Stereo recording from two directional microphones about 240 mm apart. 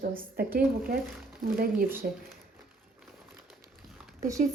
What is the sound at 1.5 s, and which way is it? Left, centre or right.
Speech, right.